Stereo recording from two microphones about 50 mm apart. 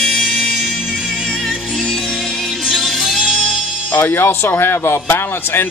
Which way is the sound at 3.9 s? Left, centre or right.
Left.